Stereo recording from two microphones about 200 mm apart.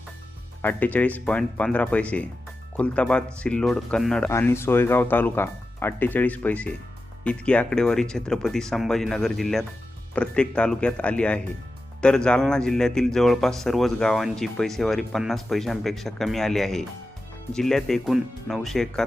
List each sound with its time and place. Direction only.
0.6 s speech: 10° left (ahead or behind)